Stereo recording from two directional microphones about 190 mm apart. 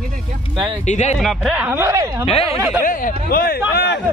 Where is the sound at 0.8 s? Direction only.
40° left (ahead or behind).